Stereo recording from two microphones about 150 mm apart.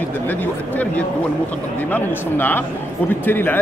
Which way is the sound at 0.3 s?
10° left (ahead or behind).